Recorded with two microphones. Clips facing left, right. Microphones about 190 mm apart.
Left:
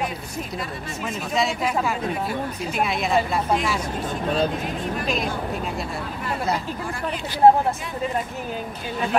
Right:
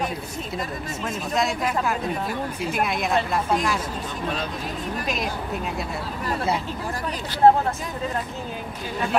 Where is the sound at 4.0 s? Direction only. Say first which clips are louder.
Left 5 dB; 40° left (ahead or behind).